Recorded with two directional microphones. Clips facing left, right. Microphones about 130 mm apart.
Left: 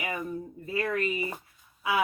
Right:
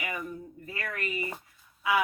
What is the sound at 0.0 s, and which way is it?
A woman's voice, 25° left (ahead or behind).